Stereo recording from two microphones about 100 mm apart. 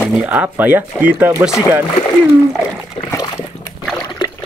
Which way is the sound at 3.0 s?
65° left (ahead or behind).